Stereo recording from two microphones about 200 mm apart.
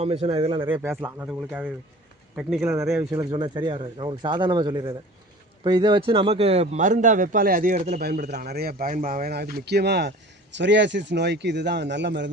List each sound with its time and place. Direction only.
0.0 s speech: 30° right (ahead or behind)
0.7 s speech: 10° right (ahead or behind)
2.6 s a man's voice: 15° right (ahead or behind); by 12.3 s 60° right (ahead or behind)